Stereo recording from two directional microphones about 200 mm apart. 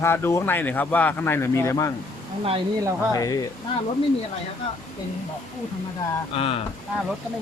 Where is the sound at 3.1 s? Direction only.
15° left (ahead or behind).